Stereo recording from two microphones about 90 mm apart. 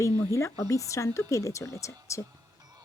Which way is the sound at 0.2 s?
35° left (ahead or behind).